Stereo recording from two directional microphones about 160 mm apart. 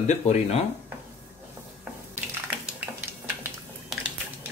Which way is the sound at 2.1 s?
10° right (ahead or behind).